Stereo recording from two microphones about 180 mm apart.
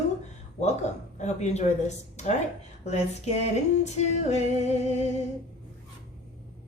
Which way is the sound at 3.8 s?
40° left (ahead or behind).